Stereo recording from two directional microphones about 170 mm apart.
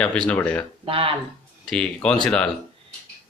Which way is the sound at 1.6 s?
5° left (ahead or behind).